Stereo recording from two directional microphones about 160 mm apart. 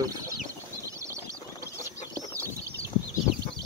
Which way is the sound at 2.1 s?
20° right (ahead or behind).